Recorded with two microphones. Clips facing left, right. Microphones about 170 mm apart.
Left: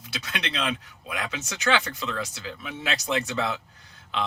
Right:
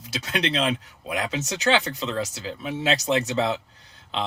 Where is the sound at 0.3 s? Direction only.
35° right (ahead or behind).